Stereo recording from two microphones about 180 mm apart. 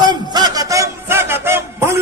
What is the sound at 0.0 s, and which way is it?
A man's voice, 25° right (ahead or behind).